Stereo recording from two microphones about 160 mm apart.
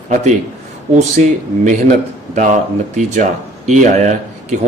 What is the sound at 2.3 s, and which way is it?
Speech, 50° right (ahead or behind).